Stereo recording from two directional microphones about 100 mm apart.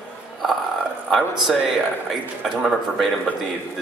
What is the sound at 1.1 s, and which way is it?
Speech, centre (ahead or behind).